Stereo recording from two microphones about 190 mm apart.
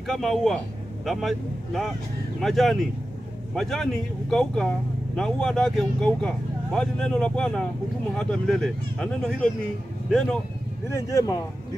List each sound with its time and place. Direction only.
0.0 s speech: centre (ahead or behind)
10.9 s speech: 15° left (ahead or behind)